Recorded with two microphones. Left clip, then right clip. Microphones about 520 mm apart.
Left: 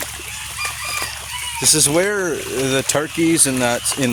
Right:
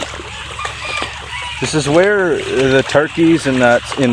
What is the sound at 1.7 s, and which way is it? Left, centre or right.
Speech, left.